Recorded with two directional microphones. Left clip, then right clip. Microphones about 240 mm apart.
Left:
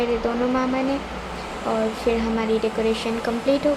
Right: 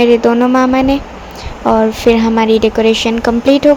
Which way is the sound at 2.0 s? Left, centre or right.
Right.